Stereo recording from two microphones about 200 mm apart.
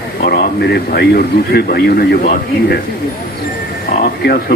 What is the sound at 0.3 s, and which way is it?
A man's voice, 50° left (ahead or behind).